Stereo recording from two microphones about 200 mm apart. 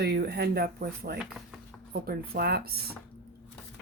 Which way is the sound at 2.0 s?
50° right (ahead or behind).